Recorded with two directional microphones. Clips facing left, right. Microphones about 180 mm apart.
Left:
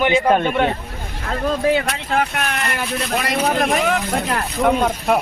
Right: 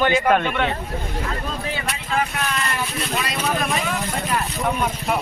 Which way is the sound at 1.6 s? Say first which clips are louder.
Left 10 dB; 65° left (ahead or behind).